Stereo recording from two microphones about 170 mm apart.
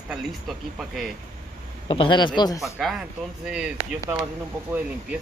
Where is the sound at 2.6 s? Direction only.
Centre (ahead or behind).